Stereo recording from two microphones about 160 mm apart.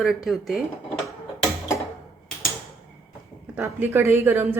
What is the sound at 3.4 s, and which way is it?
Speech, 10° right (ahead or behind).